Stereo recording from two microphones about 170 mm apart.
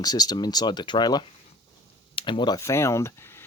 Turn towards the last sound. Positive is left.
turn(degrees=15)  # may be behind; listen again after turning